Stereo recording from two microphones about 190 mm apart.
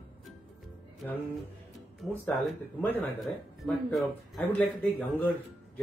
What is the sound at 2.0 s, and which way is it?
Speech, centre (ahead or behind).